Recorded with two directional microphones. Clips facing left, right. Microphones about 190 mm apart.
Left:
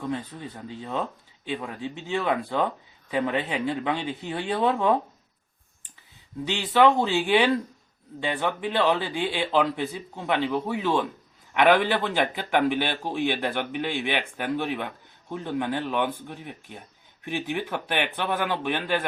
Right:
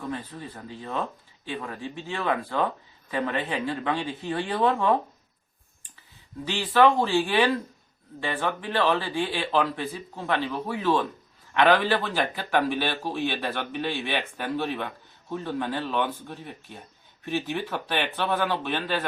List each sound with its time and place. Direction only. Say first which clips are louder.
0.1 s a man's voice: left 3 dB; 20° left (ahead or behind)
6.4 s a man's voice: even; 20° left (ahead or behind)